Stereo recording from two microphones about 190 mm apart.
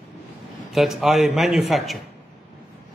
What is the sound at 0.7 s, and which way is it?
A man's voice, centre (ahead or behind).